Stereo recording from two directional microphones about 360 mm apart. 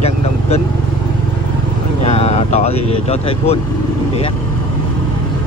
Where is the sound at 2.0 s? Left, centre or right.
Centre.